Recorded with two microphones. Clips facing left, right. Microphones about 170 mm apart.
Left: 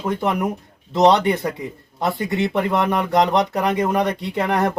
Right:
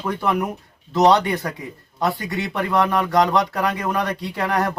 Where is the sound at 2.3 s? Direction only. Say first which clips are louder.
Left 2 dB; 25° left (ahead or behind).